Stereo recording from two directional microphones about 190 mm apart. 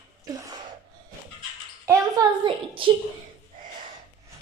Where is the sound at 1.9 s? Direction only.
20° right (ahead or behind).